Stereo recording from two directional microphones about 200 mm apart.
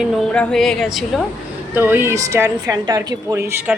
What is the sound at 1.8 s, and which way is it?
A woman's voice, 10° right (ahead or behind).